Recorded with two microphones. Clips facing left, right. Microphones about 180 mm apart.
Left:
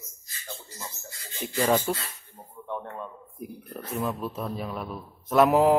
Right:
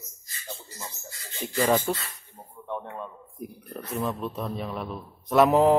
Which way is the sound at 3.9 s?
Centre (ahead or behind).